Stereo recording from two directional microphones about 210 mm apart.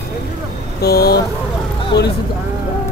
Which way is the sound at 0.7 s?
50° left (ahead or behind).